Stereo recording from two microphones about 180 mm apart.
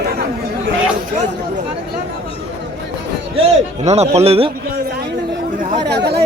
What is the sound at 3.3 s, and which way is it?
A man's voice, 35° right (ahead or behind).